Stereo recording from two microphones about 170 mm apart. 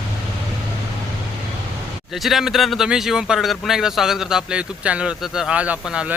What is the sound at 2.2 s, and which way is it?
A man's voice, centre (ahead or behind).